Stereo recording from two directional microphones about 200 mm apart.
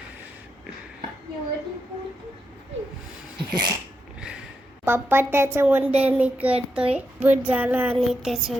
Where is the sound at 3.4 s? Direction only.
20° right (ahead or behind).